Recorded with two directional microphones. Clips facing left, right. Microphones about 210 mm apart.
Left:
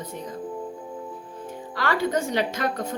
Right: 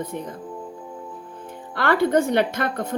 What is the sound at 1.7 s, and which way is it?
A woman's voice, 55° right (ahead or behind).